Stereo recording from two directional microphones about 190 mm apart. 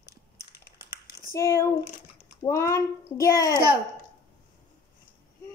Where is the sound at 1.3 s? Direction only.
15° left (ahead or behind).